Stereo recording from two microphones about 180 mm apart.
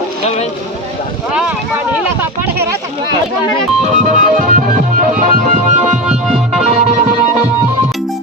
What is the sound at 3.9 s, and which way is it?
Music, 45° right (ahead or behind).